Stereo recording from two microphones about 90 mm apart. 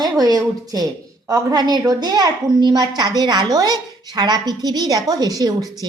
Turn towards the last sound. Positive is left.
turn(degrees=-45)  # may be behind; listen again after turning